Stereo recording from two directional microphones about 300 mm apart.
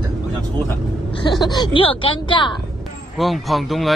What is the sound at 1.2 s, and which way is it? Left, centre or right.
Speech, centre.